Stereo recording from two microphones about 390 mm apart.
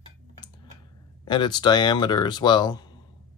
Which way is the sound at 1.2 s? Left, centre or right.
Centre.